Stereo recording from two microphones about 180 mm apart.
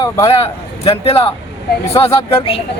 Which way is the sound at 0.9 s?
30° left (ahead or behind).